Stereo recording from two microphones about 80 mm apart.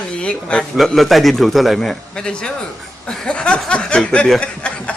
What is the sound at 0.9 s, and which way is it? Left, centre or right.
A man's voice, centre.